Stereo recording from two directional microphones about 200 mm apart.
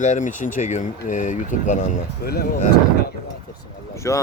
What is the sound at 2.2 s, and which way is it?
Speech, 50° left (ahead or behind).